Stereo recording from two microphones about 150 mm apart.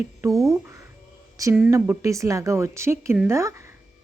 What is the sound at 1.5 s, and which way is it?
Speech, 10° right (ahead or behind).